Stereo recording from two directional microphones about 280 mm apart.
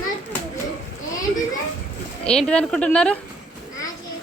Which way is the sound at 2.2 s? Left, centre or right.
Centre.